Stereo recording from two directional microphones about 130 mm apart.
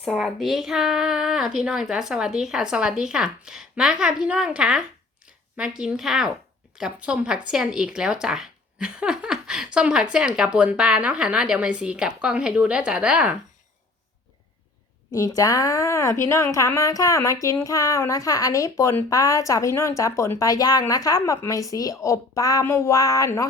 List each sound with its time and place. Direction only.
0.0 s a woman's voice: centre (ahead or behind)
15.4 s speech: 25° left (ahead or behind)